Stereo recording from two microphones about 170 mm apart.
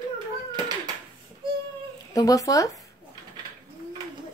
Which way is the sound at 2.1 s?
20° left (ahead or behind).